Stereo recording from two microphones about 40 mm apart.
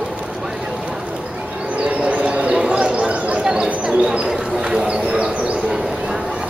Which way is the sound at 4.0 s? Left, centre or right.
Right.